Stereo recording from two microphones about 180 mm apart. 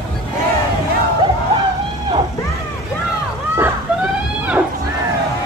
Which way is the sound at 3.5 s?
10° right (ahead or behind).